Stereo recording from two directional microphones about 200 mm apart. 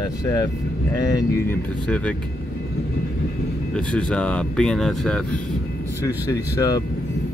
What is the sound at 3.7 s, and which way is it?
Speech, 5° left (ahead or behind).